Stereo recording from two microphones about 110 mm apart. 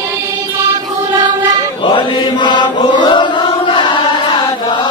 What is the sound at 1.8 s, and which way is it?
Chant, 45° left (ahead or behind).